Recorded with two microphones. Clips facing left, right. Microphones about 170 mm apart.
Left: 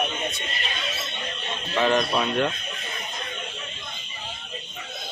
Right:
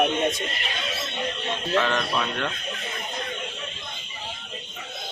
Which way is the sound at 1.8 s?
15° left (ahead or behind).